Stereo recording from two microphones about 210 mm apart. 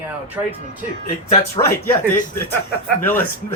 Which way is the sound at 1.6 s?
25° left (ahead or behind).